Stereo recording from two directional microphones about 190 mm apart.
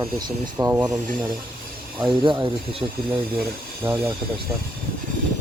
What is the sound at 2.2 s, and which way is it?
Speech, 25° right (ahead or behind).